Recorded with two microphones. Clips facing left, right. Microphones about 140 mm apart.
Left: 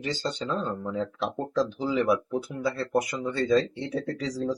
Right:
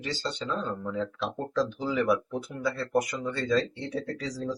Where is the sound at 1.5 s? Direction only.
20° left (ahead or behind).